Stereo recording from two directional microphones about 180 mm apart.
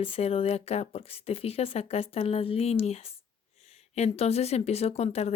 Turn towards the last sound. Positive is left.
turn(degrees=35)  # may be behind; listen again after turning